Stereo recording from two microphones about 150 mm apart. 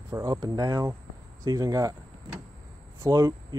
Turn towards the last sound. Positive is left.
turn(degrees=-25)  # may be behind; listen again after turning